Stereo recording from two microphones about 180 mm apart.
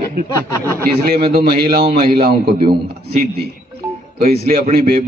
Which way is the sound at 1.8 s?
30° right (ahead or behind).